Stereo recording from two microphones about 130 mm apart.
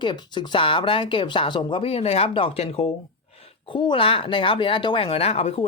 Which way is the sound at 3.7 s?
40° left (ahead or behind).